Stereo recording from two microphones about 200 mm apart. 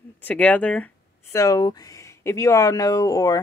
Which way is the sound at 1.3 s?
15° left (ahead or behind).